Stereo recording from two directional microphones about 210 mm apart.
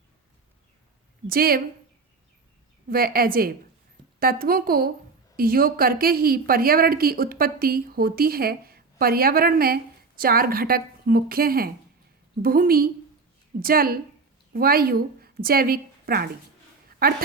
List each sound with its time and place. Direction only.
1.3 s a woman's voice: 45° right (ahead or behind)
2.9 s a woman's voice: 45° right (ahead or behind)